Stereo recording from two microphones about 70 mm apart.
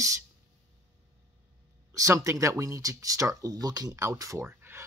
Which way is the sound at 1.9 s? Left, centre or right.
Right.